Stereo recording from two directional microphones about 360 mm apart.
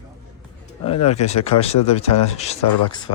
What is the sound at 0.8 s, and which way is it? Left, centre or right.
Speech, centre.